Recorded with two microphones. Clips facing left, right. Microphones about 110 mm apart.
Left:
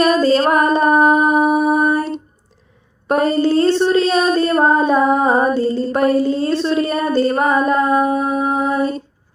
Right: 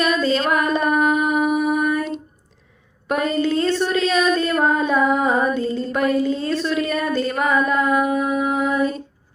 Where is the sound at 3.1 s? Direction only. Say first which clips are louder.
Left 5 dB; 35° left (ahead or behind).